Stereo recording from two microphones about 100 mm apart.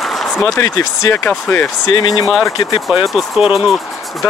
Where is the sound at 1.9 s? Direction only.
50° left (ahead or behind).